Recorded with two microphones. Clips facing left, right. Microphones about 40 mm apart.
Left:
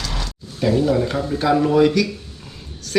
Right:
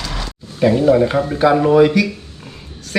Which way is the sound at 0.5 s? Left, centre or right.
Right.